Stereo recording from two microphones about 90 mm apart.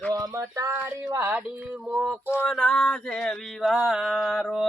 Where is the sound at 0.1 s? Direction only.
40° right (ahead or behind).